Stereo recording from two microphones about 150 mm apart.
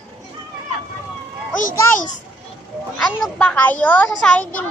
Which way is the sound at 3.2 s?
5° left (ahead or behind).